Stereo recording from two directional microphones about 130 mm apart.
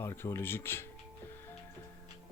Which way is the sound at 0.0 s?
20° left (ahead or behind).